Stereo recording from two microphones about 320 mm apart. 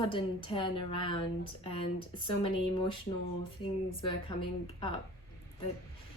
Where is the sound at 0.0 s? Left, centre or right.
Centre.